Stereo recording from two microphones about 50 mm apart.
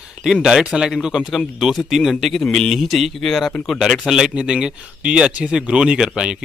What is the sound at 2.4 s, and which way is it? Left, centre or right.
Speech, centre.